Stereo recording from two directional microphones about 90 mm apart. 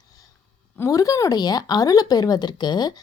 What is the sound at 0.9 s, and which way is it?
Speech, 40° left (ahead or behind).